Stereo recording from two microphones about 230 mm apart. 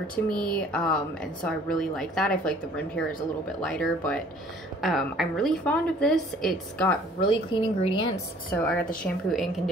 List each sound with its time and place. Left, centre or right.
0.1 s a woman's voice: centre
7.2 s a woman's voice: left
8.5 s a woman's voice: centre